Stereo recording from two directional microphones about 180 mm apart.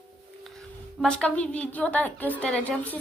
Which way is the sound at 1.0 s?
5° left (ahead or behind).